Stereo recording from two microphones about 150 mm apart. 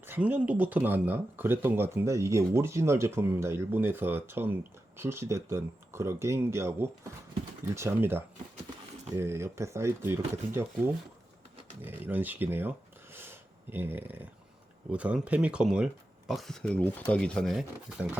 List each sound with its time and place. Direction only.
0.0 s speech: 10° right (ahead or behind)